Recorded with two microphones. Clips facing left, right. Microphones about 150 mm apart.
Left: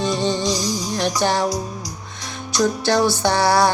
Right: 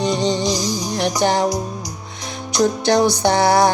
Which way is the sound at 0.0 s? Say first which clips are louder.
Right 2 dB; 20° right (ahead or behind).